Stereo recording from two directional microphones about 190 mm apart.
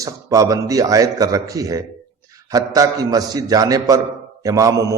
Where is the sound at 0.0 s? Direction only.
20° right (ahead or behind).